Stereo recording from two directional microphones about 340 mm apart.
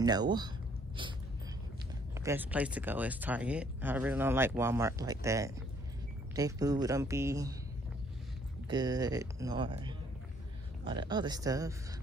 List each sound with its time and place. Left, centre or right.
0.0 s speech: centre
2.1 s speech: centre
8.6 s speech: centre